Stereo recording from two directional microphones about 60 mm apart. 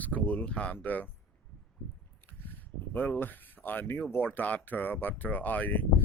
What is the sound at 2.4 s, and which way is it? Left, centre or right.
Speech, left.